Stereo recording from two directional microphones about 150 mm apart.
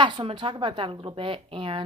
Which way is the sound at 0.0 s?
35° right (ahead or behind).